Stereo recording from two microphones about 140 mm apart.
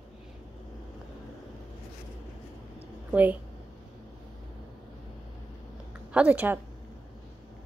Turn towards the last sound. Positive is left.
turn(degrees=-10)  # may be behind; listen again after turning